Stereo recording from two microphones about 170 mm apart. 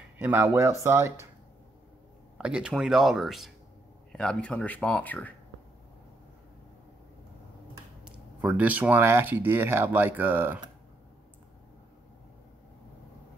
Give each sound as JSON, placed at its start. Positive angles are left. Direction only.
{"t": 0.2, "sound": "speech", "side_deg": -15}
{"t": 2.3, "sound": "speech", "side_deg": -5}
{"t": 8.0, "sound": "speech", "side_deg": -5}